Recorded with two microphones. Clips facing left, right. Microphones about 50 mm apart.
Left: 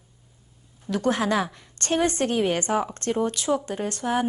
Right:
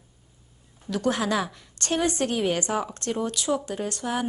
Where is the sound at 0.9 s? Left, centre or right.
Left.